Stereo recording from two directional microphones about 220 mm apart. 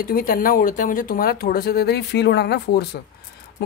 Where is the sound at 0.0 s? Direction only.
40° left (ahead or behind).